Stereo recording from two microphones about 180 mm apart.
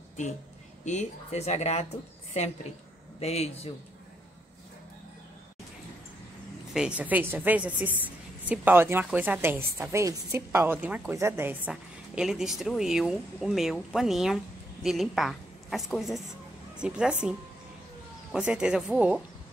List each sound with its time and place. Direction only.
0.8 s speech: 40° left (ahead or behind)
6.7 s a woman's voice: 5° right (ahead or behind)